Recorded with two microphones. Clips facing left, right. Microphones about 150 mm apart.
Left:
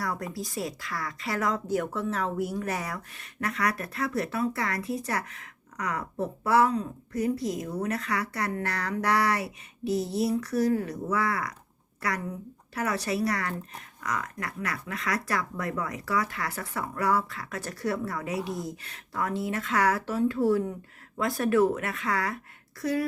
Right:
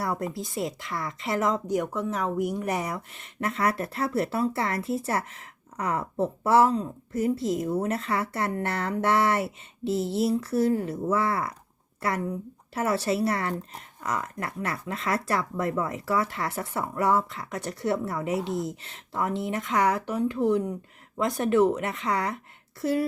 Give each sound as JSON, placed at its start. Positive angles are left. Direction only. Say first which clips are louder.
{"t": 0.0, "sound": "speech", "louder": "right 3 dB", "side_deg": -25}
{"t": 12.7, "sound": "speech", "louder": "right 3 dB", "side_deg": -25}